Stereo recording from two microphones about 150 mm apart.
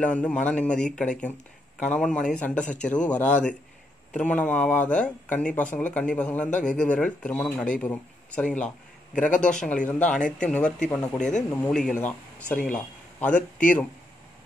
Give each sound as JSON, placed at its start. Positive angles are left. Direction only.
{"t": 0.0, "sound": "speech", "side_deg": 10}
{"t": 9.1, "sound": "a man's voice", "side_deg": 55}
{"t": 9.6, "sound": "speech", "side_deg": 10}
{"t": 13.3, "sound": "a man's voice", "side_deg": 60}